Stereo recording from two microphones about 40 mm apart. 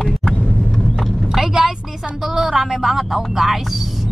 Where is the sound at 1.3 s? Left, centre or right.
Centre.